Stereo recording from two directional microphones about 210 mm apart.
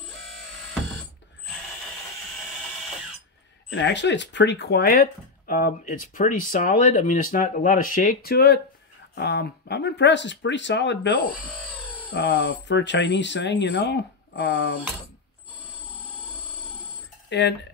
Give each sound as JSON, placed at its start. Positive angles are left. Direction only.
{"t": 3.7, "sound": "speech", "side_deg": 60}
{"t": 17.3, "sound": "speech", "side_deg": 55}